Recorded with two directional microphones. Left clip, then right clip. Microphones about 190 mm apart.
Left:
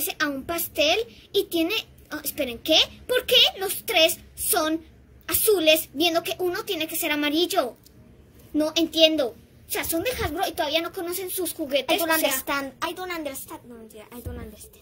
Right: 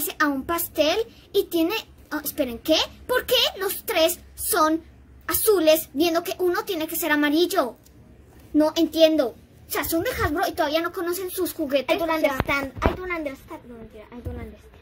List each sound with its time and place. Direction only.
0.0 s a child's voice: 30° right (ahead or behind)
5.2 s a woman's voice: 30° right (ahead or behind)
11.8 s speech: 5° left (ahead or behind)